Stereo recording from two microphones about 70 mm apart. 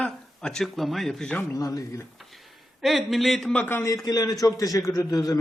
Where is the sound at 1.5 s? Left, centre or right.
Left.